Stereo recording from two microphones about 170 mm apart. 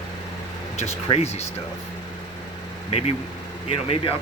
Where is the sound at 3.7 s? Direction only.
35° left (ahead or behind).